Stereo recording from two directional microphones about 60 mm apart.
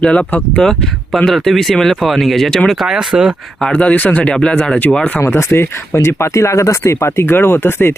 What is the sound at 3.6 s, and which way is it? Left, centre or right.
Speech, centre.